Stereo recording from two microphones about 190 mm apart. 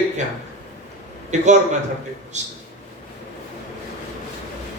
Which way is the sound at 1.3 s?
40° right (ahead or behind).